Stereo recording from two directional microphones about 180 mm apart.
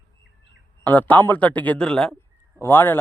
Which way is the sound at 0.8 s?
10° left (ahead or behind).